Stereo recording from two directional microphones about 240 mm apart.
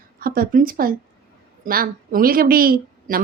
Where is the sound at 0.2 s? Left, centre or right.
Right.